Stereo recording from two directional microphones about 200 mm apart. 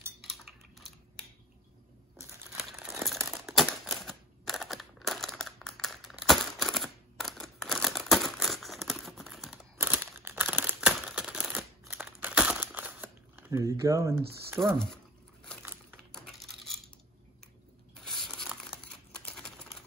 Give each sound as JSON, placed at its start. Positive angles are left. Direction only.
{"t": 0.2, "sound": "cutlery", "side_deg": 0}
{"t": 2.5, "sound": "crumpling", "side_deg": 0}
{"t": 14.6, "sound": "speech", "side_deg": -15}
{"t": 18.0, "sound": "tearing", "side_deg": 0}
{"t": 19.2, "sound": "typewriter", "side_deg": 5}